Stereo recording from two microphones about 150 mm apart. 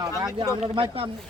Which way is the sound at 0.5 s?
40° right (ahead or behind).